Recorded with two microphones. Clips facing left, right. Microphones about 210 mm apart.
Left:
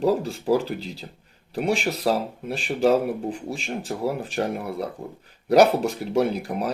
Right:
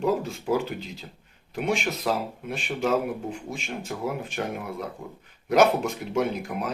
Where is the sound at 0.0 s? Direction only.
35° left (ahead or behind).